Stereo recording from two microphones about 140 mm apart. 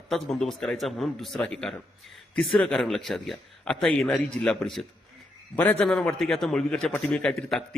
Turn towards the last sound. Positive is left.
turn(degrees=5)  # may be behind; listen again after turning